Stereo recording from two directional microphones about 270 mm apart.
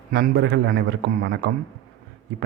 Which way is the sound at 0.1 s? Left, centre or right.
Right.